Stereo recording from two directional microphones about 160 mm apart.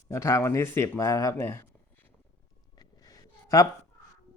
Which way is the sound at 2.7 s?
25° left (ahead or behind).